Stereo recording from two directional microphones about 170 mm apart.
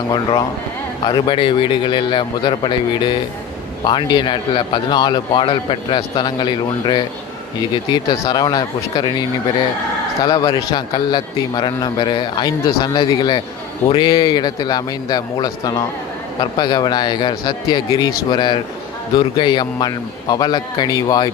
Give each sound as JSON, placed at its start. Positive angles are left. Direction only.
{"t": 0.1, "sound": "a man's voice", "side_deg": 25}
{"t": 10.2, "sound": "a man's voice", "side_deg": 25}